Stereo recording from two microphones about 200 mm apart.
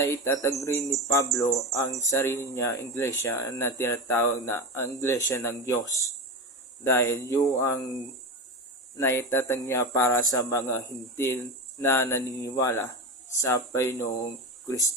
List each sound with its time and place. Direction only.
0.0 s speech: 15° left (ahead or behind)
9.0 s speech: 10° left (ahead or behind)